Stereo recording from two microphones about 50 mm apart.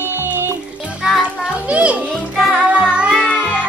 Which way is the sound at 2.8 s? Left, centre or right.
Centre.